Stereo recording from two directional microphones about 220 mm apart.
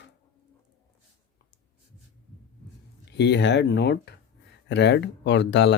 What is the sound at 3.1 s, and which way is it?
Speech, 50° left (ahead or behind).